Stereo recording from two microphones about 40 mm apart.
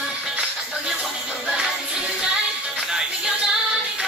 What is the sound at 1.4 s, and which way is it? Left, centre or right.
Music, right.